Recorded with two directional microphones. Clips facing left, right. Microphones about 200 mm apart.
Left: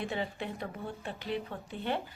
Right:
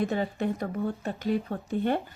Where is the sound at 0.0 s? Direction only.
45° right (ahead or behind).